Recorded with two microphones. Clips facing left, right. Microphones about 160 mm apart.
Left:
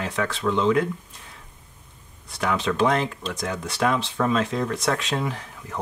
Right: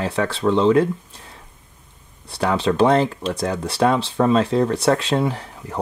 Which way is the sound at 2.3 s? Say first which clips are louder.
Right 5 dB; 30° right (ahead or behind).